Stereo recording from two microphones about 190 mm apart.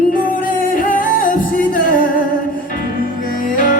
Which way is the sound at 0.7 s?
45° left (ahead or behind).